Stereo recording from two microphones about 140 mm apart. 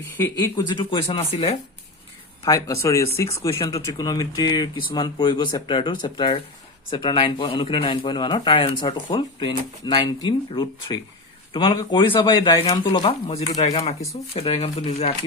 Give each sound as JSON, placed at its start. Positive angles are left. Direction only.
{"t": 0.5, "sound": "speech", "side_deg": 35}
{"t": 2.4, "sound": "speech", "side_deg": 25}